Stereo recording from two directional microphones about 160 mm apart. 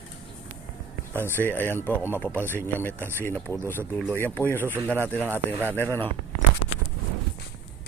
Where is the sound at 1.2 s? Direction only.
10° left (ahead or behind).